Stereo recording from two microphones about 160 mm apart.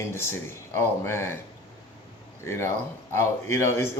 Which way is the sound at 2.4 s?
15° left (ahead or behind).